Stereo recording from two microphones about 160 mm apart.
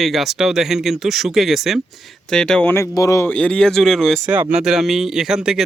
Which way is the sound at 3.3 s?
5° left (ahead or behind).